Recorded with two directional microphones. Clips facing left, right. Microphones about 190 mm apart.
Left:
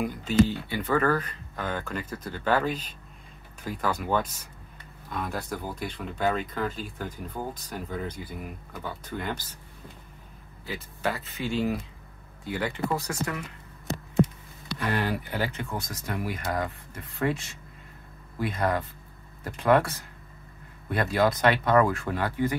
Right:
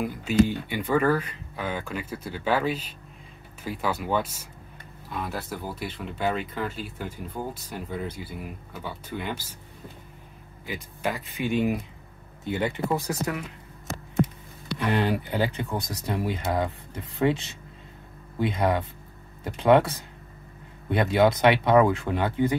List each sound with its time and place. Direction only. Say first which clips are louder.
0.0 s speech: right 1 dB; 5° right (ahead or behind)
10.6 s speech: even; 15° right (ahead or behind)
14.8 s speech: right 4 dB; 20° right (ahead or behind)
18.4 s speech: right 3 dB; 25° right (ahead or behind)